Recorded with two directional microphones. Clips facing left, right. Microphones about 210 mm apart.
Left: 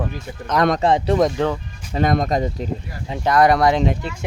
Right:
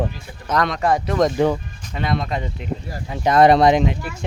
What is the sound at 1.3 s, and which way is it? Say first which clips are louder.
Speech: right 3 dB; 10° right (ahead or behind).